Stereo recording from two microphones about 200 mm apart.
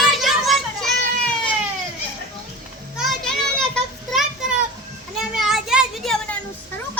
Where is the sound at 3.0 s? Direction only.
Centre (ahead or behind).